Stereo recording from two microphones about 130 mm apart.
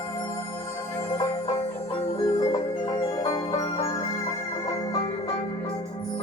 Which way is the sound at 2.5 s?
30° left (ahead or behind).